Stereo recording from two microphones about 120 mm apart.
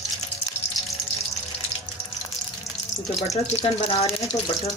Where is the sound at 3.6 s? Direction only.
55° left (ahead or behind).